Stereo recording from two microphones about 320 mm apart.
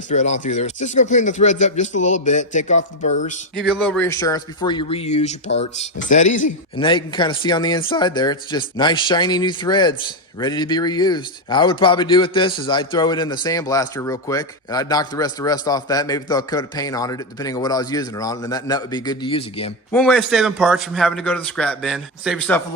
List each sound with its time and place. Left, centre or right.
0.1 s speech: left
3.5 s a man's voice: centre
19.9 s a man's voice: centre